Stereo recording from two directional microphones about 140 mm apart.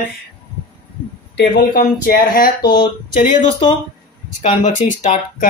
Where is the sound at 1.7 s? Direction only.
90° left.